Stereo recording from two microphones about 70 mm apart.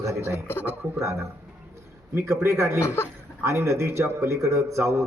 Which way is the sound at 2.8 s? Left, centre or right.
Left.